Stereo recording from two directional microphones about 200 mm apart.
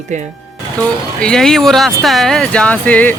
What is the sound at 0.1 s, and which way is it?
Speech, 35° right (ahead or behind).